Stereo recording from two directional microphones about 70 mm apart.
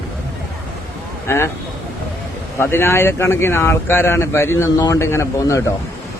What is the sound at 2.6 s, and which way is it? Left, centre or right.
Speech, left.